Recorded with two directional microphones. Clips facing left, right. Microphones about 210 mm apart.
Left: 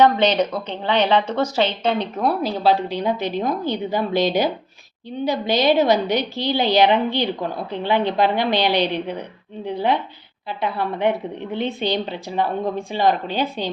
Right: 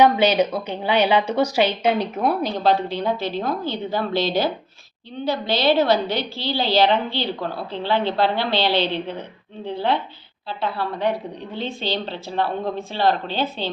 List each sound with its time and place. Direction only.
0.0 s a woman's voice: 10° right (ahead or behind)
2.4 s a woman's voice: 5° left (ahead or behind)